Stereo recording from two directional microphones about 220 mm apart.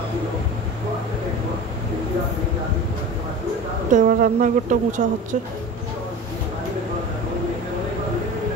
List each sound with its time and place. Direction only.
3.9 s a woman's voice: 35° right (ahead or behind)